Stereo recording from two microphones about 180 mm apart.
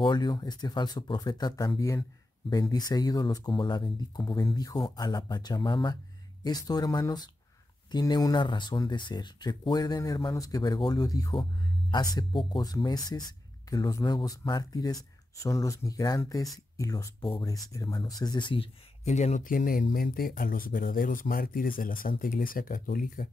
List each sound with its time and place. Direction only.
0.0 s speech: 25° left (ahead or behind); by 23.2 s 50° left (ahead or behind)